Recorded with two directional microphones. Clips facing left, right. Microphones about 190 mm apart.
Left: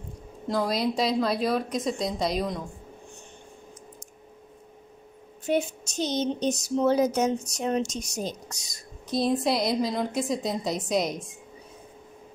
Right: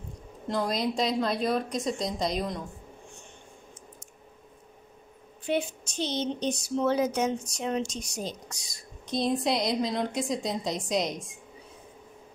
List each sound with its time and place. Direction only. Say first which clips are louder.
0.5 s a woman's voice: left 2 dB; centre (ahead or behind)
5.4 s speech: left 3 dB; 45° left (ahead or behind)
9.0 s a woman's voice: left 2 dB; centre (ahead or behind)